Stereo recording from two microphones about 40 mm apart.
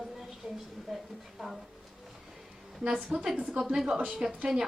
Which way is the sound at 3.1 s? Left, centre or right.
Right.